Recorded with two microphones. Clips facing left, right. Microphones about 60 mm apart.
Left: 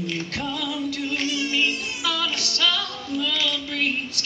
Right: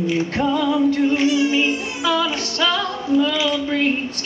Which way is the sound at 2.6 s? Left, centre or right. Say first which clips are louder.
Right 5 dB; right.